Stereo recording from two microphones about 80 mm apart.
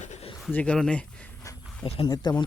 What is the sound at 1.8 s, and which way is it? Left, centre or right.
Speech, left.